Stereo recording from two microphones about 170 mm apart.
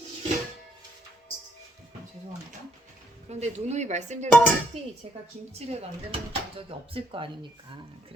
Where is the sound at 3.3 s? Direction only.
40° right (ahead or behind).